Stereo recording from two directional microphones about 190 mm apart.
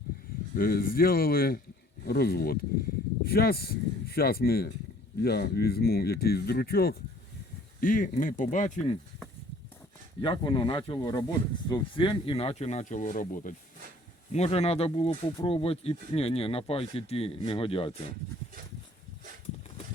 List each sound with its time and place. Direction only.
0.5 s speech: 50° left (ahead or behind)
10.2 s speech: 25° left (ahead or behind); by 13.5 s 45° left (ahead or behind)
14.3 s speech: 35° left (ahead or behind)